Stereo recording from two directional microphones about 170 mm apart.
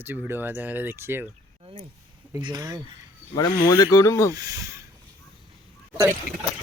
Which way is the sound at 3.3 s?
20° left (ahead or behind).